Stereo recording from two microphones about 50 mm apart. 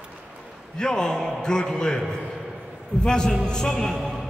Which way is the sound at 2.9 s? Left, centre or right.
Centre.